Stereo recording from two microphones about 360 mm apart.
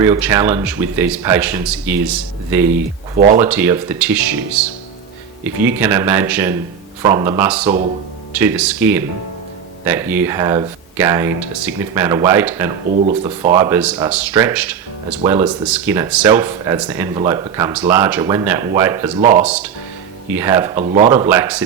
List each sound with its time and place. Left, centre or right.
0.0 s speech: centre
3.2 s speech: right
3.4 s speech: centre
5.4 s speech: centre
19.2 s speech: right
19.5 s speech: centre
20.8 s speech: centre
21.1 s speech: centre